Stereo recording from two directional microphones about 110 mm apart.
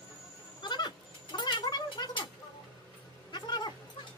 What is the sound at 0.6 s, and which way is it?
Goat, 45° left (ahead or behind).